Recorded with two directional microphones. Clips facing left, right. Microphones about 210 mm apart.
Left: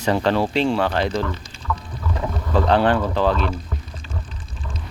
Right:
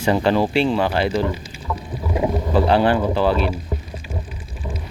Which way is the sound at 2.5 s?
5° right (ahead or behind).